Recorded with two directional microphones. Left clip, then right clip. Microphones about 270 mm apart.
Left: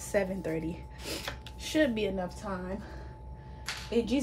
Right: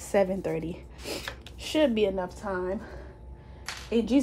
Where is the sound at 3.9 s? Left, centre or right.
Right.